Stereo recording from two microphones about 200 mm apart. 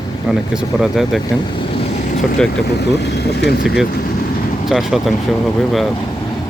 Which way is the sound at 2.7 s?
55° left (ahead or behind).